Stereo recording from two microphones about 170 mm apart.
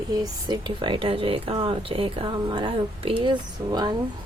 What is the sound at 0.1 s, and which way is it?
Speech, 25° right (ahead or behind).